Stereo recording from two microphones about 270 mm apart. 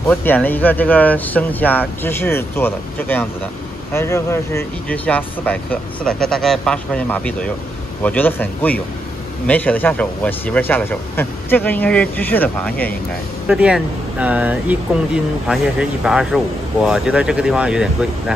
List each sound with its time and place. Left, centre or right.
0.1 s speech: centre